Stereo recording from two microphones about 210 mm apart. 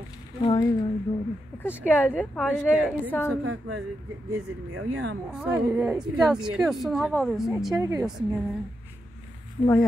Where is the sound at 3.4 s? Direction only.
80° right.